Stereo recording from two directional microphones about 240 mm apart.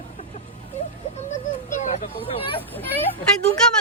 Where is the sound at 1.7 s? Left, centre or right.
Left.